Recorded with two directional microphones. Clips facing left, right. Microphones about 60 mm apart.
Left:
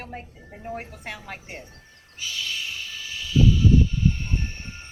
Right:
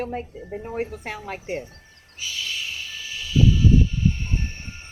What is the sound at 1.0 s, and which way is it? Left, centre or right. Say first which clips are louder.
Speech: right 4 dB; right.